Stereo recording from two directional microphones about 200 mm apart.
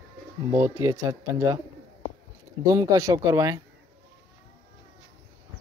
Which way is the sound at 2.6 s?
15° right (ahead or behind).